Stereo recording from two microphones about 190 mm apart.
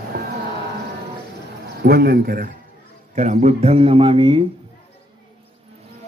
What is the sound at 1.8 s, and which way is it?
Speech, 55° right (ahead or behind).